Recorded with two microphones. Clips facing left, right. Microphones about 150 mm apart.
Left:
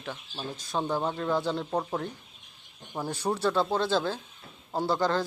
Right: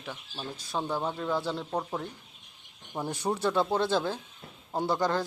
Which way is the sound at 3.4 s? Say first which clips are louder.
Even; 20° right (ahead or behind).